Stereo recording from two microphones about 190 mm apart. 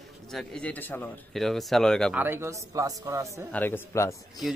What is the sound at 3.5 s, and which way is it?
Speech, 10° left (ahead or behind).